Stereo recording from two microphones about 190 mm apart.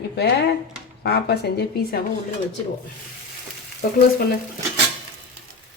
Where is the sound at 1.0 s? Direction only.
60° left (ahead or behind).